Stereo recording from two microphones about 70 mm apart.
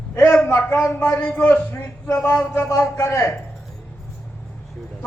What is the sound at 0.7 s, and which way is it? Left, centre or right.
Speech, left.